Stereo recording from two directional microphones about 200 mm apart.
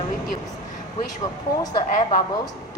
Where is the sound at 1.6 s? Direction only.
20° left (ahead or behind).